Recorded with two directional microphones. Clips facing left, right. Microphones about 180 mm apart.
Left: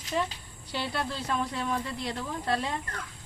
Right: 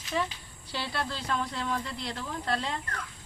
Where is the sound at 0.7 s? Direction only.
15° left (ahead or behind).